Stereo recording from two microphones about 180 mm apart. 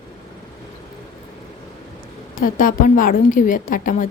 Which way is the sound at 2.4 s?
50° left (ahead or behind).